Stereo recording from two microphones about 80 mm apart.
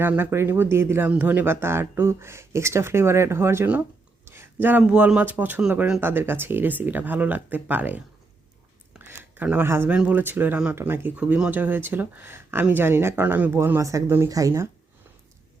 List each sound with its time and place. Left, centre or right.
0.2 s speech: right
4.3 s a sound: right
4.8 s speech: centre
9.0 s a sound: right
9.6 s speech: right
9.9 s speech: centre
11.2 s speech: centre
13.7 s speech: right